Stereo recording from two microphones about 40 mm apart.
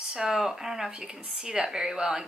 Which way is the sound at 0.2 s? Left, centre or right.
Centre.